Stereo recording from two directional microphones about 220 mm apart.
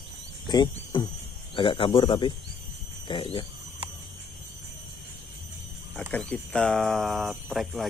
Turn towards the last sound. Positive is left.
turn(degrees=0)  # may be behind; listen again after turning